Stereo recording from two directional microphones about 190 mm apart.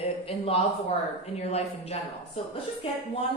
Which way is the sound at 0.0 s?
30° left (ahead or behind).